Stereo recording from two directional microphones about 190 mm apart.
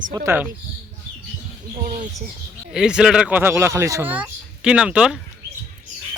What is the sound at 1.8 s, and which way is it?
Speech, 45° right (ahead or behind).